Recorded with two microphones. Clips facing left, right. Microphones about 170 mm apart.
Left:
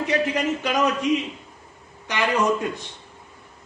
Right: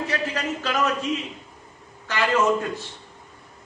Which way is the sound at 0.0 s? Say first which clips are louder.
Left 4 dB; 20° left (ahead or behind).